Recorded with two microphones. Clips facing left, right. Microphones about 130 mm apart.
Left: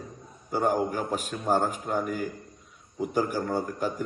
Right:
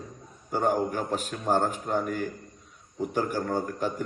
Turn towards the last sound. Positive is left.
turn(degrees=5)  # may be behind; listen again after turning